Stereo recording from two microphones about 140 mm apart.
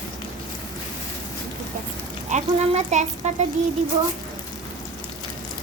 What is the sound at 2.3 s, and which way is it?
Speech, 55° right (ahead or behind).